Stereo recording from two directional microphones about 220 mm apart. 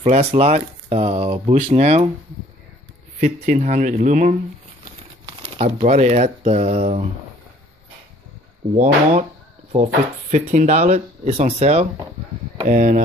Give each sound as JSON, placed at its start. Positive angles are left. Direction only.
{"t": 0.0, "sound": "speech", "side_deg": -30}
{"t": 3.2, "sound": "speech", "side_deg": -35}
{"t": 8.7, "sound": "speech", "side_deg": -35}
{"t": 10.3, "sound": "speech", "side_deg": -35}